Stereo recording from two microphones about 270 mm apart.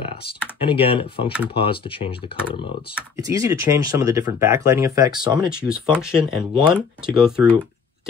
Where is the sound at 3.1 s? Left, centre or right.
Centre.